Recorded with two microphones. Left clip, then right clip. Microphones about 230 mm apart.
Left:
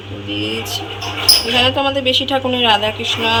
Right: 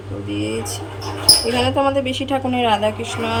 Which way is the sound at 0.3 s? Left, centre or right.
Centre.